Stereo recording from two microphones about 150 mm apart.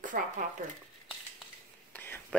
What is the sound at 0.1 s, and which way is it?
Speech, 80° right.